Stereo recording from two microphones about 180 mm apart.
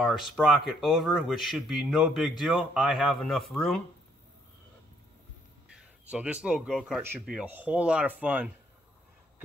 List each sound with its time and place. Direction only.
0.0 s speech: centre (ahead or behind)
6.0 s speech: 5° right (ahead or behind)